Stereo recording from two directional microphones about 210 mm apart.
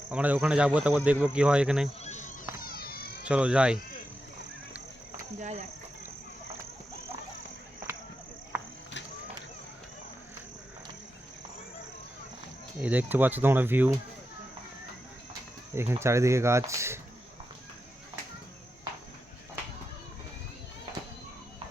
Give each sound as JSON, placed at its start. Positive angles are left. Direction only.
{"t": 0.1, "sound": "speech", "side_deg": -5}
{"t": 2.0, "sound": "insect", "side_deg": 35}
{"t": 3.2, "sound": "speech", "side_deg": -5}
{"t": 5.4, "sound": "speech", "side_deg": -35}
{"t": 12.8, "sound": "speech", "side_deg": -10}
{"t": 15.7, "sound": "speech", "side_deg": -10}